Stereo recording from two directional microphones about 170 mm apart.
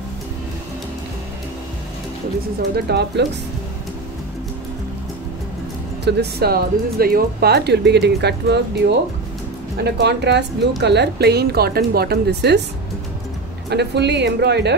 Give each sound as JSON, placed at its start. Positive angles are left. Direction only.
{"t": 2.7, "sound": "speech", "side_deg": -75}
{"t": 6.0, "sound": "speech", "side_deg": -65}
{"t": 9.8, "sound": "speech", "side_deg": -75}
{"t": 13.7, "sound": "speech", "side_deg": -80}